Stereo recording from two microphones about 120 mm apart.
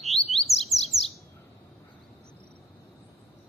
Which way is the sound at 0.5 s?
60° left (ahead or behind).